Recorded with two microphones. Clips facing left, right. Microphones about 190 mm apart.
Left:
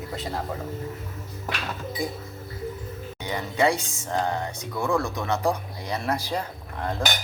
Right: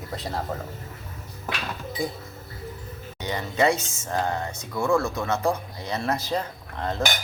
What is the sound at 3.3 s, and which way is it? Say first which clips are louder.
Speech: right 1 dB; 15° left (ahead or behind).